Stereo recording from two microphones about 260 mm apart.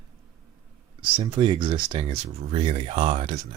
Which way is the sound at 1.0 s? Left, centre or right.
Centre.